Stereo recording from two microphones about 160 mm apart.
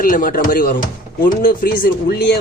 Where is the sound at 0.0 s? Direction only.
60° left (ahead or behind).